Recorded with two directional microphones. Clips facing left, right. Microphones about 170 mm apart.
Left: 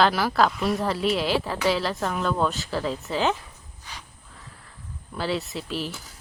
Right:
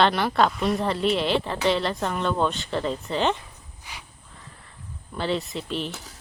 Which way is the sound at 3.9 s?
10° right (ahead or behind).